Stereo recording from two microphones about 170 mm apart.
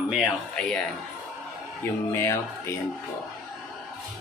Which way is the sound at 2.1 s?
15° left (ahead or behind).